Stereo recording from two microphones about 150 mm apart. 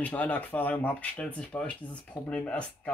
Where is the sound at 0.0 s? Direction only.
10° left (ahead or behind).